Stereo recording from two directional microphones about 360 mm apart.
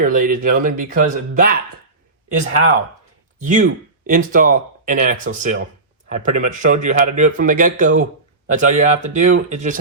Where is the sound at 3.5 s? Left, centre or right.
Right.